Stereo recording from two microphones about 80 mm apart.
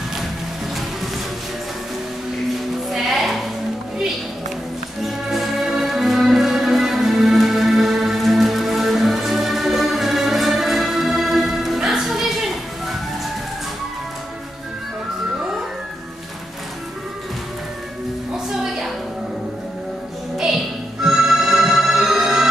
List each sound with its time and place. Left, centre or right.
2.9 s sheep: centre
5.0 s music: centre
18.3 s music: centre
20.3 s music: centre